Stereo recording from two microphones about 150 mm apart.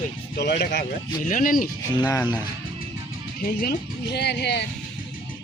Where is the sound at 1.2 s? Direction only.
60° left (ahead or behind).